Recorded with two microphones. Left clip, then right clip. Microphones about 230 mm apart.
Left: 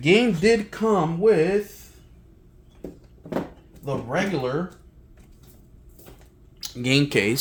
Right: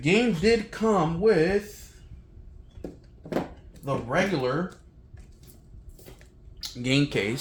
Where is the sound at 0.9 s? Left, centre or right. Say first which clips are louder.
Left 3 dB; left.